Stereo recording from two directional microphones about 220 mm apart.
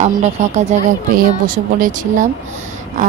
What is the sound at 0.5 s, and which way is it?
Speech, 30° right (ahead or behind).